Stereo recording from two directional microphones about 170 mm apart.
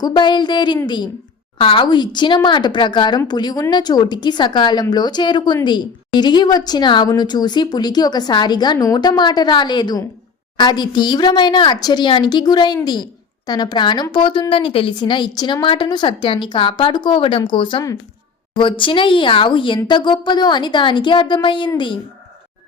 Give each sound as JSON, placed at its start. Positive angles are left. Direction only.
{"t": 0.0, "sound": "a woman's voice", "side_deg": 25}